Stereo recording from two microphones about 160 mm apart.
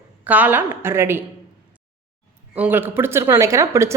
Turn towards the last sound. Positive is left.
turn(degrees=-20)  # may be behind; listen again after turning